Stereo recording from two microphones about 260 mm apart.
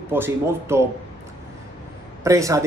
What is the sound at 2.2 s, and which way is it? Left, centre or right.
Speech, centre.